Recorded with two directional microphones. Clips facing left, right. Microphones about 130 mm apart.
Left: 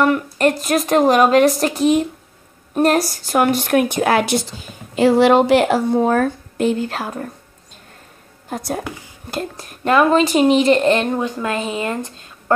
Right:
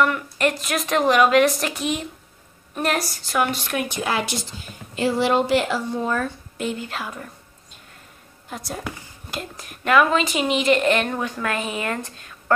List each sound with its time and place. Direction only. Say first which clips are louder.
0.0 s a woman's voice: left 5 dB; 40° left (ahead or behind); by 4.5 s 60° left (ahead or behind)
4.9 s speech: left 8 dB; 75° left (ahead or behind); by 7.2 s 40° left (ahead or behind)
8.5 s speech: left 8 dB; 45° left (ahead or behind)
9.3 s a woman's voice: left 7 dB; 35° left (ahead or behind)